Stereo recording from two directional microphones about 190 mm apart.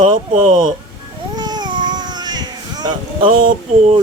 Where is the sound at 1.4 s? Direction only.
20° right (ahead or behind).